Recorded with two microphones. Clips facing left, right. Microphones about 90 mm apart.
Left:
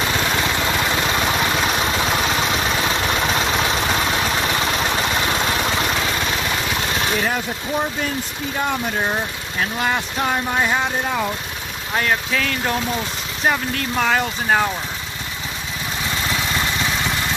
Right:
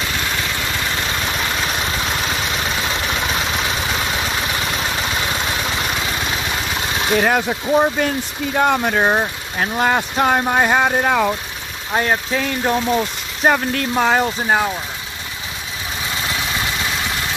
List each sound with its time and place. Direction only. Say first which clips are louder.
7.2 s speech: right 5 dB; 65° right (ahead or behind)
8.5 s speech: right 6 dB; 60° right (ahead or behind)
9.6 s speech: right 4 dB; 40° right (ahead or behind)
11.0 s speech: right 6 dB; 85° right
11.9 s speech: right 2 dB; 25° right (ahead or behind)
13.4 s speech: right 4 dB; 45° right (ahead or behind)
13.9 s speech: right 3 dB; 25° right (ahead or behind)
14.4 s speech: right 1 dB; 10° right (ahead or behind)